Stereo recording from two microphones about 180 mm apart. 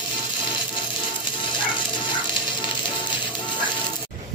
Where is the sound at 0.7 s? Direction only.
25° left (ahead or behind).